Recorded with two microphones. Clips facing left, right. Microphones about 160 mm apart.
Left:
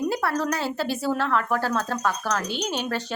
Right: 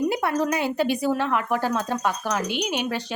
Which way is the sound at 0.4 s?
15° right (ahead or behind).